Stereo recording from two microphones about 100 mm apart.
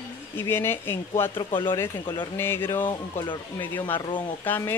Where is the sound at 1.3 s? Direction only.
55° left (ahead or behind).